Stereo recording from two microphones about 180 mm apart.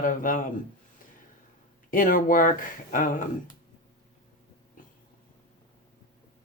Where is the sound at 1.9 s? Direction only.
50° left (ahead or behind).